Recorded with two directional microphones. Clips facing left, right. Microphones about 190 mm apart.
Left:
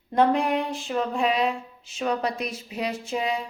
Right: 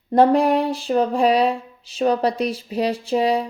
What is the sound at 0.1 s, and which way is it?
Speech, 35° right (ahead or behind).